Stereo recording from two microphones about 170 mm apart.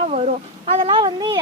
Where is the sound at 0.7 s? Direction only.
25° right (ahead or behind).